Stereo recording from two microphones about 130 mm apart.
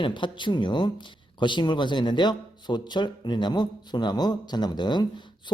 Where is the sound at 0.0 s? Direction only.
35° left (ahead or behind).